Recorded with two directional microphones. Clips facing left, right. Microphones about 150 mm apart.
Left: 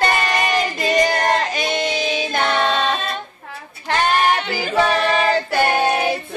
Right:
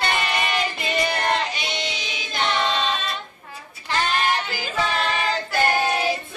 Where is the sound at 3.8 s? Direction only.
55° left (ahead or behind).